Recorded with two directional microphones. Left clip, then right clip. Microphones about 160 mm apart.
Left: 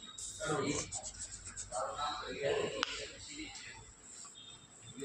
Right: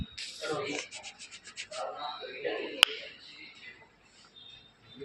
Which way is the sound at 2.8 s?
35° right (ahead or behind).